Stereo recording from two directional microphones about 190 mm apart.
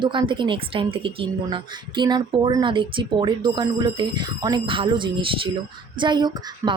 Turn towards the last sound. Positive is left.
turn(degrees=-25)  # may be behind; listen again after turning